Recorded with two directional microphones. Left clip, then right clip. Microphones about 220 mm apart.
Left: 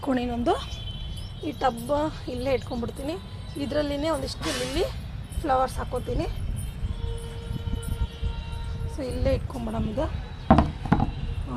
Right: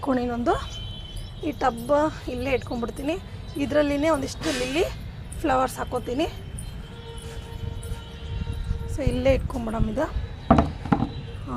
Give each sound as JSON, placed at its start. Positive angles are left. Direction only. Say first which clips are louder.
{"t": 0.0, "sound": "a woman's voice", "louder": "right 2 dB", "side_deg": 0}
{"t": 1.5, "sound": "speech", "louder": "right 2 dB", "side_deg": -20}
{"t": 9.0, "sound": "speech", "louder": "right 5 dB", "side_deg": -30}